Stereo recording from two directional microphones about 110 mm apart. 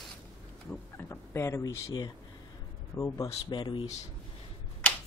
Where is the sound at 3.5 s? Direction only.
45° left (ahead or behind).